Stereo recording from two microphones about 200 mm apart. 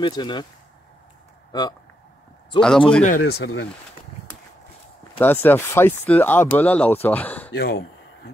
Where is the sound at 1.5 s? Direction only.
20° left (ahead or behind).